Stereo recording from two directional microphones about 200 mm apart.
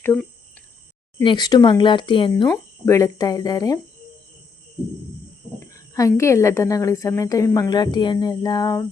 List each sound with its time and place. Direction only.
0.0 s speech: 10° left (ahead or behind)
1.2 s speech: 20° left (ahead or behind)
2.8 s a woman's voice: 15° left (ahead or behind)
5.5 s a woman's voice: 15° left (ahead or behind)